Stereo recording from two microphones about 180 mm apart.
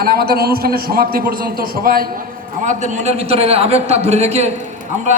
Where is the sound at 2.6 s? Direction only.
40° right (ahead or behind).